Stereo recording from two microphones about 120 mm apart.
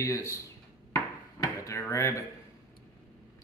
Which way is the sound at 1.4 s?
25° left (ahead or behind).